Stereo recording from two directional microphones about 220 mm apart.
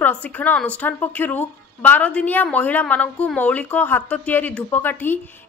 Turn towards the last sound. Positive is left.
turn(degrees=10)  # may be behind; listen again after turning